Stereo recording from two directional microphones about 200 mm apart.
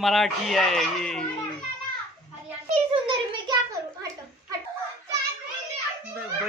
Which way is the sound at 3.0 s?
25° right (ahead or behind).